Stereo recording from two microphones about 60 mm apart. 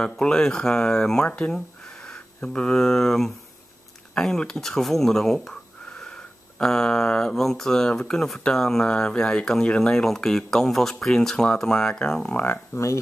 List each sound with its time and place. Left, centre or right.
0.0 s speech: centre
12.7 s speech: left